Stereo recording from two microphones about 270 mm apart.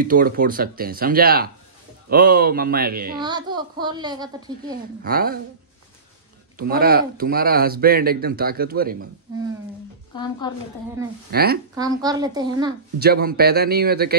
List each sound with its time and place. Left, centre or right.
0.0 s speech: right
3.2 s a child's voice: centre
4.7 s speech: right
6.6 s speech: right
10.1 s a woman's voice: centre
11.2 s speech: right
11.7 s a child's voice: centre
13.0 s speech: right